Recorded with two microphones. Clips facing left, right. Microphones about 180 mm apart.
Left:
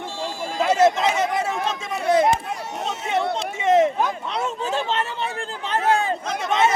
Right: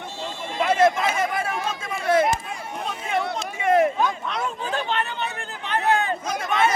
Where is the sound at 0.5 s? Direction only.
25° left (ahead or behind).